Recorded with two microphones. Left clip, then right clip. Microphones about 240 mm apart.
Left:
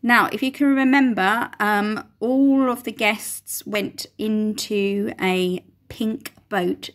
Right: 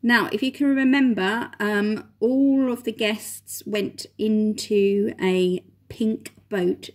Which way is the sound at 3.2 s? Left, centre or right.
Centre.